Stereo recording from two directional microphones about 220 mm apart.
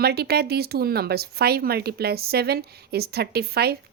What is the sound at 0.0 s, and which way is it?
Speech, 45° right (ahead or behind).